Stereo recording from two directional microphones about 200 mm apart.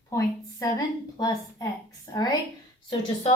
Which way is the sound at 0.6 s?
20° left (ahead or behind).